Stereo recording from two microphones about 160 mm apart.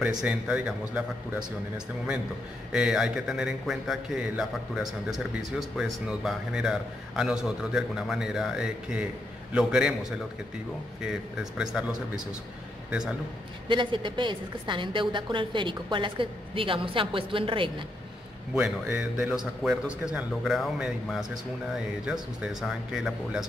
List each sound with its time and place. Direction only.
0.2 s speech: 5° right (ahead or behind)
2.7 s a man's voice: 5° right (ahead or behind)
13.7 s a woman's voice: 30° right (ahead or behind)
18.5 s a man's voice: 5° right (ahead or behind)